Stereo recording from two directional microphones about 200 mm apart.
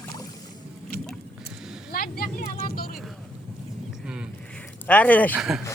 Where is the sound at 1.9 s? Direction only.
45° left (ahead or behind).